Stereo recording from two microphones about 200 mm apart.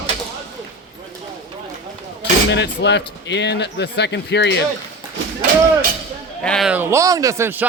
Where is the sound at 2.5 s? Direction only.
60° left (ahead or behind).